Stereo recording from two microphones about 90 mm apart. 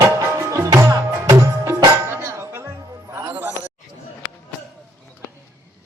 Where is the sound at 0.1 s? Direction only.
30° right (ahead or behind).